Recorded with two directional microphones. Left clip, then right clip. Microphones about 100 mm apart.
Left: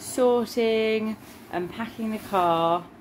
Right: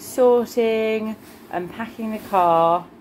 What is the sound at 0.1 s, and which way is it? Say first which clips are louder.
Speech: right 6 dB; 25° left (ahead or behind).